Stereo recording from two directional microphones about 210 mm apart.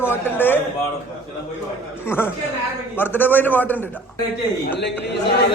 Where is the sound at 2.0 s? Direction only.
10° left (ahead or behind).